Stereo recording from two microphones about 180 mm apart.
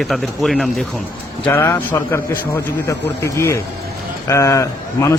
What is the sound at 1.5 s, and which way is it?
A man's voice, 10° left (ahead or behind).